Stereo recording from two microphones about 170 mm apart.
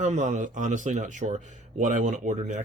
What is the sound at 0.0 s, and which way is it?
Speech, 45° right (ahead or behind).